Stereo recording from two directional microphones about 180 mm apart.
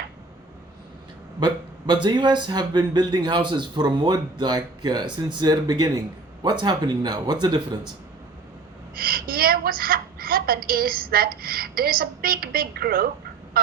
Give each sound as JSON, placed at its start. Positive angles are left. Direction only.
{"t": 1.9, "sound": "speech", "side_deg": -25}
{"t": 9.0, "sound": "a woman's voice", "side_deg": -55}